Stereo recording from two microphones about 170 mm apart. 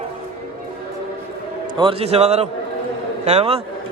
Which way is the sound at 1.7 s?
30° right (ahead or behind).